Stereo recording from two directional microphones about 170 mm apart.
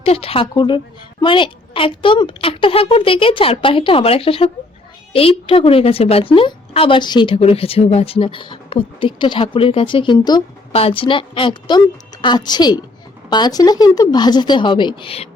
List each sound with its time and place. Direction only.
0.0 s a woman's voice: 35° left (ahead or behind)